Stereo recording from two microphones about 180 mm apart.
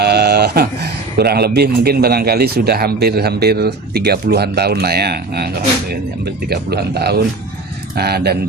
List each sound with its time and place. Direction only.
0.0 s a man's voice: 65° right (ahead or behind)